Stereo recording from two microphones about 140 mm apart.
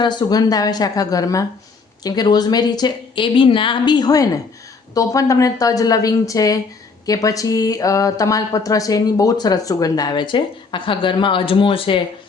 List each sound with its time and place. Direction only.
0.0 s speech: 30° left (ahead or behind)